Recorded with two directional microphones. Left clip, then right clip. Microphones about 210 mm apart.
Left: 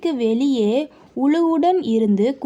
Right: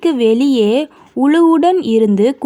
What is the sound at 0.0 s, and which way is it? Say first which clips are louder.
Speech: right 7 dB; 25° right (ahead or behind).